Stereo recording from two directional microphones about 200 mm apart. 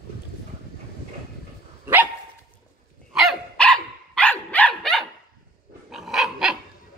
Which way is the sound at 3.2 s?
5° left (ahead or behind).